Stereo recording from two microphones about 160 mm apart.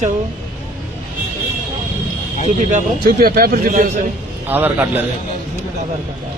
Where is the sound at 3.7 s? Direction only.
55° right (ahead or behind).